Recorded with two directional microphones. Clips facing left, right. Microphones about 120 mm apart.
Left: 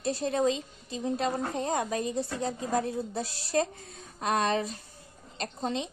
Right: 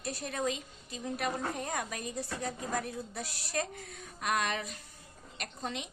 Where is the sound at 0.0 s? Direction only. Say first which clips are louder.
Left 8 dB; 25° left (ahead or behind).